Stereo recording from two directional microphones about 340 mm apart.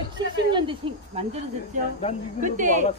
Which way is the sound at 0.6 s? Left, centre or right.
Centre.